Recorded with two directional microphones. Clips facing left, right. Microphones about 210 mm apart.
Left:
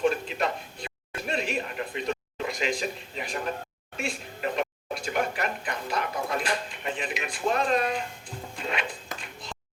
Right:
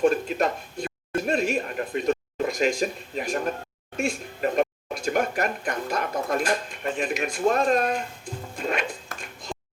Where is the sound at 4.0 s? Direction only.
45° right (ahead or behind).